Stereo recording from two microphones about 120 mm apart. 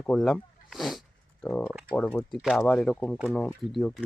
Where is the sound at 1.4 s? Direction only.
10° left (ahead or behind).